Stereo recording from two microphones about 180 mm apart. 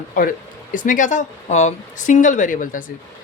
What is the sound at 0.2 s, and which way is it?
Speech, 50° left (ahead or behind).